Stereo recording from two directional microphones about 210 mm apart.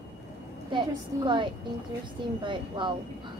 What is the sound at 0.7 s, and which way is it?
A woman's voice, 20° right (ahead or behind).